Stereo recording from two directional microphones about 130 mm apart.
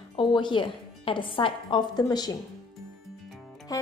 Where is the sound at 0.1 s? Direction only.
40° left (ahead or behind).